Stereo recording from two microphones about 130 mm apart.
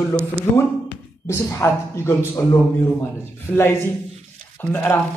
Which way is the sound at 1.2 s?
20° left (ahead or behind).